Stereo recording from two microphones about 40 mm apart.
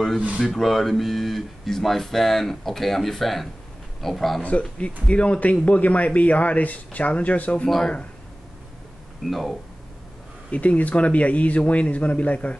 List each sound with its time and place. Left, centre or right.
0.4 s speech: centre
4.4 s speech: left
9.3 s speech: centre
10.5 s speech: left